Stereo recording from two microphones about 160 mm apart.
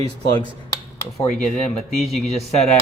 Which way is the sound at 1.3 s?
5° left (ahead or behind).